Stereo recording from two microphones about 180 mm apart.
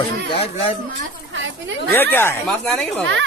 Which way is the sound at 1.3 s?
90° right.